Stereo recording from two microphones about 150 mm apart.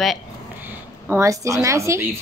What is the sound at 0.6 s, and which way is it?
Speech, 15° right (ahead or behind).